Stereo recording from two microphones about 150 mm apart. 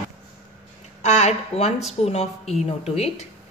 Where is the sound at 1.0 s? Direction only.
50° left (ahead or behind).